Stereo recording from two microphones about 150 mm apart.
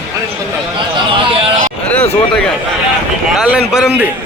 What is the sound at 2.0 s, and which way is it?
Speech, 40° left (ahead or behind).